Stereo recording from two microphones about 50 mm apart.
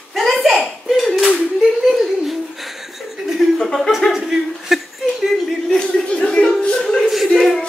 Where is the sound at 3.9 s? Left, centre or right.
Centre.